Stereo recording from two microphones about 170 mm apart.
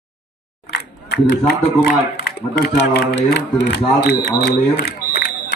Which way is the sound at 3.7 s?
80° left.